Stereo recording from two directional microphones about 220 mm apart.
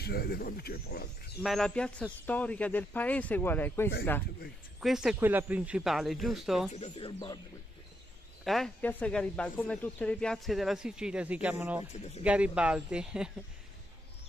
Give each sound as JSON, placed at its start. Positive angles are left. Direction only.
{"t": 0.0, "sound": "speech", "side_deg": 45}
{"t": 1.4, "sound": "speech", "side_deg": 0}
{"t": 4.7, "sound": "speech", "side_deg": -5}
{"t": 6.7, "sound": "speech", "side_deg": 25}
{"t": 8.5, "sound": "speech", "side_deg": 0}
{"t": 11.9, "sound": "speech", "side_deg": 30}
{"t": 12.2, "sound": "speech", "side_deg": -5}